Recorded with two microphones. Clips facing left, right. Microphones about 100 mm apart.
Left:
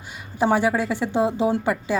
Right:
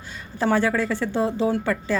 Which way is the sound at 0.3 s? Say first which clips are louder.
Left 1 dB; 15° left (ahead or behind).